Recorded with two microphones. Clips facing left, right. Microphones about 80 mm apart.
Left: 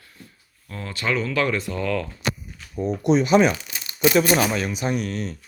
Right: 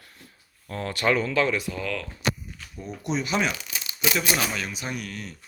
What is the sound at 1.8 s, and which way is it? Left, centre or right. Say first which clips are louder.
Speech: left 6 dB; centre.